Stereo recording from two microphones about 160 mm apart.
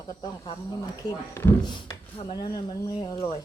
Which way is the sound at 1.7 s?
30° left (ahead or behind).